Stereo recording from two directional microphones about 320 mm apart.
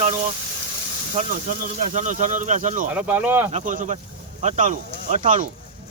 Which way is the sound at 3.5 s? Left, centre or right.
Right.